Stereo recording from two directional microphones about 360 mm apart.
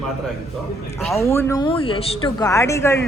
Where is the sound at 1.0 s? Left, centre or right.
Centre.